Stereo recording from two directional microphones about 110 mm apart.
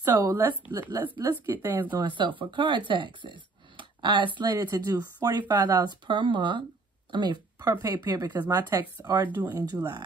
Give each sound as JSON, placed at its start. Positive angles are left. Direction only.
{"t": 0.0, "sound": "speech", "side_deg": -30}
{"t": 2.0, "sound": "speech", "side_deg": -45}
{"t": 9.3, "sound": "speech", "side_deg": -20}